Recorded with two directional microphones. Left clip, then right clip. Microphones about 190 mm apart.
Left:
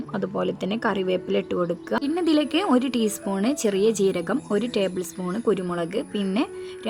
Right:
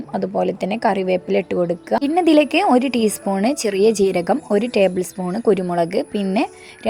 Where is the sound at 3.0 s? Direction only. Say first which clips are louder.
Right 6 dB; 10° right (ahead or behind).